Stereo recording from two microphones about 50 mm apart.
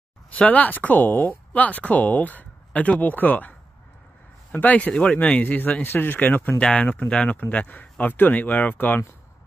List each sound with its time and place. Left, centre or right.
0.4 s a man's voice: left
5.4 s speech: left
6.6 s speech: left